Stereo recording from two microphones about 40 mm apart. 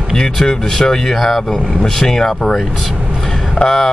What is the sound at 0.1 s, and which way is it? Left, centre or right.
Speech, centre.